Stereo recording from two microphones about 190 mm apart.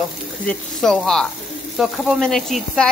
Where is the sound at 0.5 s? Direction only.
Centre (ahead or behind).